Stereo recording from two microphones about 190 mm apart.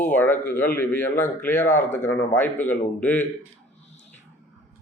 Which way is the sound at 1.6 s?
40° left (ahead or behind).